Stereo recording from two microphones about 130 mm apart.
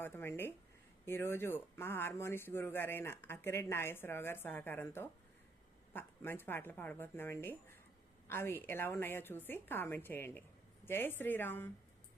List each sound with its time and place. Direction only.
0.0 s speech: 15° left (ahead or behind)